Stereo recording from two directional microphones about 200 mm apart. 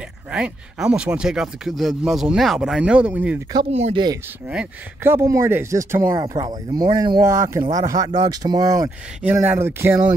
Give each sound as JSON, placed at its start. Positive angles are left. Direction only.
{"t": 0.3, "sound": "speech", "side_deg": -5}
{"t": 3.7, "sound": "speech", "side_deg": -35}
{"t": 4.5, "sound": "speech", "side_deg": -10}